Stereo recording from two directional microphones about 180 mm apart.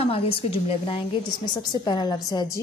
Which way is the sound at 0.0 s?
30° left (ahead or behind).